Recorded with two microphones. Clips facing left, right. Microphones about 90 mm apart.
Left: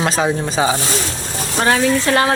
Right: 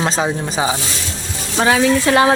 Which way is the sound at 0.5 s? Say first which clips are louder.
Left 2 dB; 15° right (ahead or behind).